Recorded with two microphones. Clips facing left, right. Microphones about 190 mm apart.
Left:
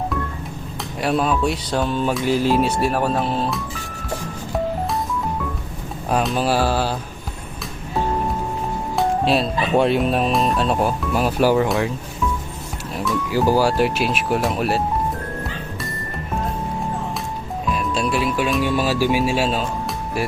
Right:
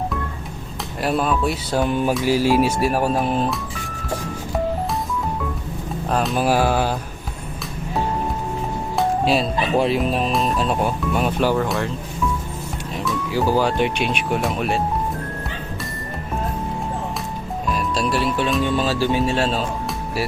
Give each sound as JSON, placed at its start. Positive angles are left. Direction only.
{"t": 1.0, "sound": "speech", "side_deg": 0}
{"t": 1.9, "sound": "speech", "side_deg": -15}
{"t": 6.1, "sound": "speech", "side_deg": 5}
{"t": 6.3, "sound": "speech", "side_deg": -10}
{"t": 9.0, "sound": "speech", "side_deg": 0}
{"t": 13.0, "sound": "speech", "side_deg": 5}
{"t": 17.7, "sound": "speech", "side_deg": 0}